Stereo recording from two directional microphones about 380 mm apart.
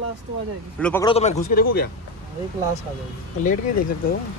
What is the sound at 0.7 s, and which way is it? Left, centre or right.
A man's voice, centre.